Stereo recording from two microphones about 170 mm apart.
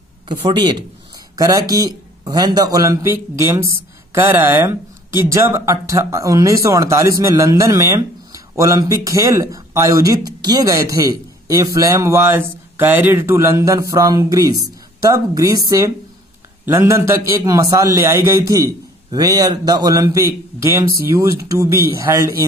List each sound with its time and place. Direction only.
0.3 s a man's voice: 25° right (ahead or behind)